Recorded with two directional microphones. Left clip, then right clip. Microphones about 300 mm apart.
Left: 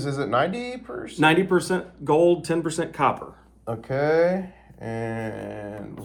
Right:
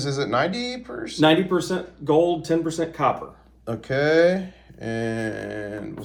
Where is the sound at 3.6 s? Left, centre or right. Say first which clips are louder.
Right 2 dB; centre.